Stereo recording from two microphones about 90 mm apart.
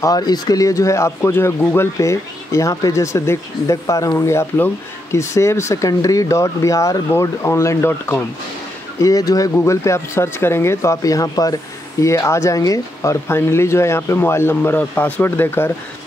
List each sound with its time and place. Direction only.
0.0 s speech: 45° left (ahead or behind); by 8.2 s 30° left (ahead or behind)
9.0 s speech: 40° left (ahead or behind)
9.6 s speech: 30° left (ahead or behind)